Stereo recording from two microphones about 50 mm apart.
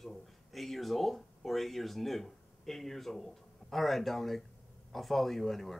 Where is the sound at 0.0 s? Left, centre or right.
Centre.